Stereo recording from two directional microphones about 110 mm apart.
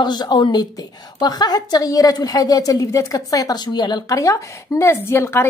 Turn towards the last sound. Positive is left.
turn(degrees=20)  # may be behind; listen again after turning